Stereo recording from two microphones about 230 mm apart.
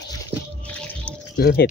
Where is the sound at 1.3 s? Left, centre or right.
Left.